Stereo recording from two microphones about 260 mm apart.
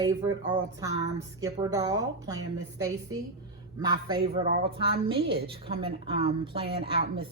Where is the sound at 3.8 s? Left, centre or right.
Centre.